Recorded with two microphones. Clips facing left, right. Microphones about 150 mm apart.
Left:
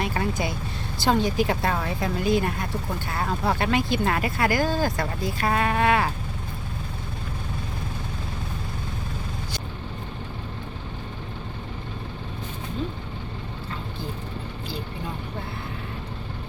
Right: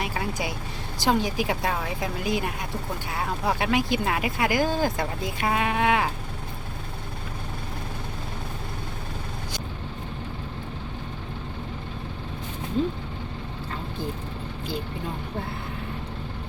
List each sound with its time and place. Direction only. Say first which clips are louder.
0.0 s speech: left 3 dB; 10° right (ahead or behind)